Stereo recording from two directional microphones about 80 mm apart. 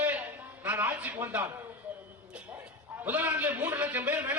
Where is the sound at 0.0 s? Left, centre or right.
Centre.